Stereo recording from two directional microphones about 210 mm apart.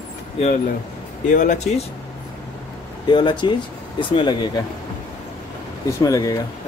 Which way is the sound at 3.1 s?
20° left (ahead or behind).